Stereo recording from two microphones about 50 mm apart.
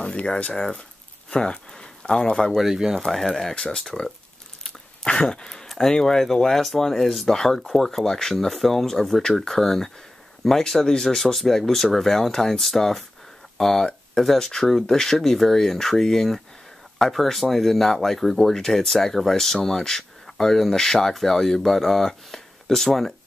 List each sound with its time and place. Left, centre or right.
0.0 s speech: left
2.5 s speech: centre
3.0 s speech: centre
5.3 s speech: centre